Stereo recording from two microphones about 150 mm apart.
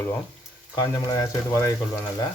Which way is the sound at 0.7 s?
25° left (ahead or behind).